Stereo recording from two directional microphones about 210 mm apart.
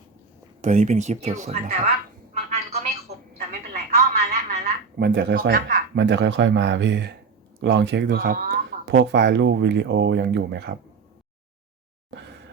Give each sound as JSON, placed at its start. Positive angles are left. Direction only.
{"t": 0.6, "sound": "speech", "side_deg": -35}
{"t": 2.5, "sound": "telephone", "side_deg": -30}
{"t": 3.9, "sound": "telephone", "side_deg": -50}
{"t": 4.3, "sound": "a sound", "side_deg": -30}
{"t": 4.9, "sound": "speech", "side_deg": -55}